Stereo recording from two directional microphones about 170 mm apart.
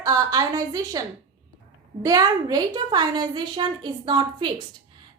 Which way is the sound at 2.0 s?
20° right (ahead or behind).